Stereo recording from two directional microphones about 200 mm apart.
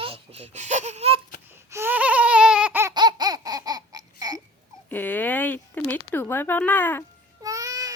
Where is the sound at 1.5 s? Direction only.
10° right (ahead or behind).